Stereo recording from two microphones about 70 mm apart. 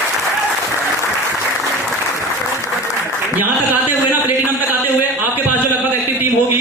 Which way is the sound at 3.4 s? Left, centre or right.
Right.